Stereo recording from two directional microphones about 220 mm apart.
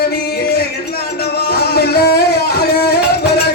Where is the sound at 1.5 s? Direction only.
45° left (ahead or behind).